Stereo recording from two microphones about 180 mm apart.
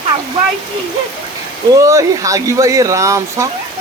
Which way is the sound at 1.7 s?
15° right (ahead or behind).